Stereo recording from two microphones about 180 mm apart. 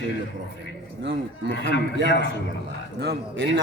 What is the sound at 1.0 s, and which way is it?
Speech, 90° right.